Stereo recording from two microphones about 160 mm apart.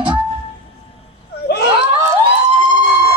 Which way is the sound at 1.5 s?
90° left.